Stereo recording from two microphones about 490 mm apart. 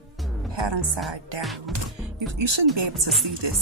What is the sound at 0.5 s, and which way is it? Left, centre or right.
Speech, right.